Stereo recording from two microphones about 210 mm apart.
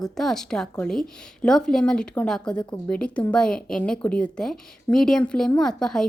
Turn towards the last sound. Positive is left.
turn(degrees=0)  # may be behind; listen again after turning